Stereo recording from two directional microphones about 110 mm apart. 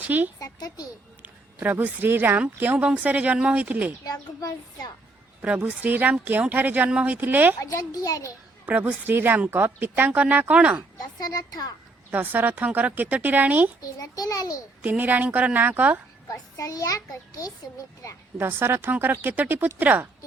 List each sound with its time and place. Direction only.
0.0 s speech: 15° right (ahead or behind)
0.3 s a sound: 35° left (ahead or behind)
1.2 s a woman's voice: 15° right (ahead or behind)
4.0 s a child's voice: 35° left (ahead or behind)
5.6 s a woman's voice: 10° right (ahead or behind)
7.6 s a child's voice: 30° left (ahead or behind)
8.6 s a woman's voice: 15° right (ahead or behind)
11.0 s a child's voice: 35° left (ahead or behind)
12.1 s a woman's voice: 15° right (ahead or behind)
14.0 s a child's voice: 35° left (ahead or behind)
14.8 s a woman's voice: 15° right (ahead or behind)
16.3 s a child's voice: 30° left (ahead or behind)
18.3 s speech: 20° right (ahead or behind)